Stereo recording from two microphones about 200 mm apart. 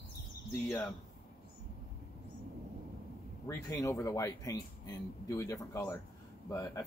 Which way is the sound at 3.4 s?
15° left (ahead or behind).